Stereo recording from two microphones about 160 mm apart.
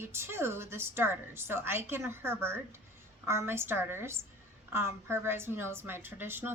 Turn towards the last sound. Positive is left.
turn(degrees=-15)  # may be behind; listen again after turning